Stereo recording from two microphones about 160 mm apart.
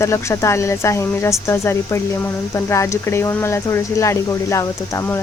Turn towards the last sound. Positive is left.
turn(degrees=15)  # may be behind; listen again after turning